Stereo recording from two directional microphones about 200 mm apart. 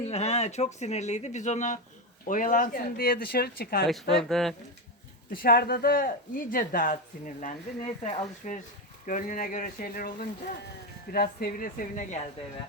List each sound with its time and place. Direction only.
0.0 s speech: 35° left (ahead or behind); by 3.8 s 50° left (ahead or behind)
3.8 s speech: centre (ahead or behind)
5.3 s speech: 50° left (ahead or behind)